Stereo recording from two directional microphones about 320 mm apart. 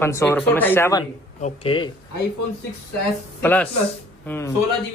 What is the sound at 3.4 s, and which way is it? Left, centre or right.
Speech, centre.